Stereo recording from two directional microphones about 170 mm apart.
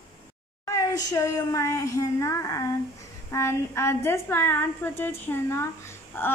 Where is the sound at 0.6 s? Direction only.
20° left (ahead or behind).